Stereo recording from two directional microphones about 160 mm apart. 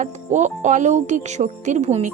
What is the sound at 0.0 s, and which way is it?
A woman's voice, 50° right (ahead or behind).